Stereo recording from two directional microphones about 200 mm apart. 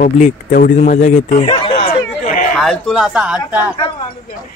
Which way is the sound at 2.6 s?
Centre (ahead or behind).